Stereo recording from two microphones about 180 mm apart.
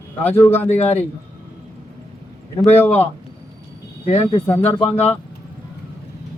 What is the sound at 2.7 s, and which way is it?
Speech, 10° left (ahead or behind).